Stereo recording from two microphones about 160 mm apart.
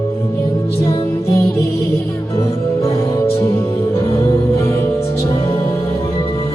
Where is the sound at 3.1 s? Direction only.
15° left (ahead or behind).